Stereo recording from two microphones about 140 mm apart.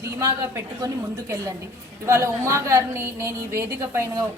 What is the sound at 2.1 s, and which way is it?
A woman's voice, 20° right (ahead or behind).